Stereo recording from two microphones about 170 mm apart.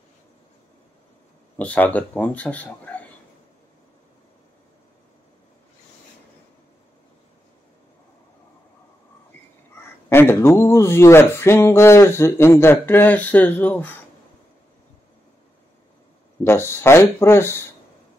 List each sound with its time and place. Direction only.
1.6 s speech: 10° left (ahead or behind)
10.0 s speech: 15° left (ahead or behind)
16.4 s speech: 15° left (ahead or behind)